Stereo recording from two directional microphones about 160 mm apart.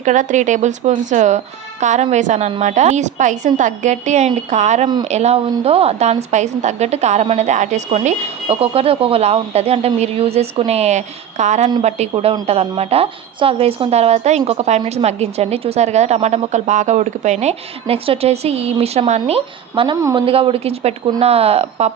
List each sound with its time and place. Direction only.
0.0 s a woman's voice: 50° right (ahead or behind); by 20.0 s 30° right (ahead or behind)
20.0 s speech: 20° right (ahead or behind)
20.2 s a woman's voice: 35° right (ahead or behind)